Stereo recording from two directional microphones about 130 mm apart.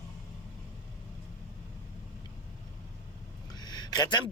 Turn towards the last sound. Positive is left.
turn(degrees=35)  # may be behind; listen again after turning